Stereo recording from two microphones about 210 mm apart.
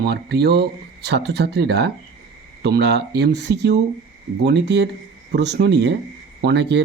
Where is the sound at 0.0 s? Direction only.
50° right (ahead or behind).